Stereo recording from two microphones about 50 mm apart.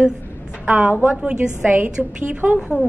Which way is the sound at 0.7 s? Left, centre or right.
Right.